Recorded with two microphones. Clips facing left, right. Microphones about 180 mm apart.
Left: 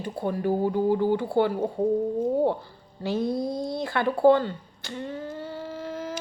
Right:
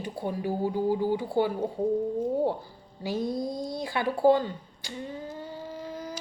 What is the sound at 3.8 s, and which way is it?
Speech, 15° right (ahead or behind).